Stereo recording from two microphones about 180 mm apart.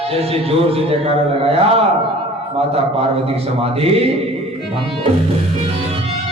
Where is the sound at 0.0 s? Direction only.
35° right (ahead or behind).